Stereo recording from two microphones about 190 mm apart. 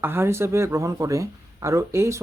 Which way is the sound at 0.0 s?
10° right (ahead or behind).